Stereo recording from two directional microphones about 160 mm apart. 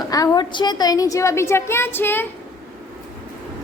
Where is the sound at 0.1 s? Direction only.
25° left (ahead or behind).